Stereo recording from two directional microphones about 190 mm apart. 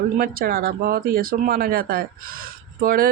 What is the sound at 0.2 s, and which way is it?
Speech, 50° right (ahead or behind).